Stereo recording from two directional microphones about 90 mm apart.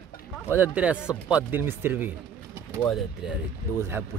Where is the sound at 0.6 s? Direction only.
15° right (ahead or behind).